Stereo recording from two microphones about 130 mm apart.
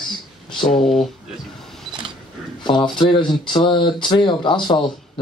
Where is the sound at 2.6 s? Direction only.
35° left (ahead or behind).